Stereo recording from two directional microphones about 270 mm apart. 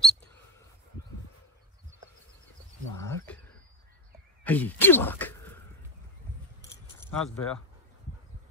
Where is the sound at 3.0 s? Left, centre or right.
Centre.